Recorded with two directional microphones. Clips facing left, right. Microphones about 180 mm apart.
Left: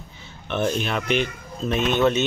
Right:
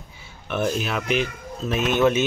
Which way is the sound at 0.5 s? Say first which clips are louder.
Left 1 dB; 5° right (ahead or behind).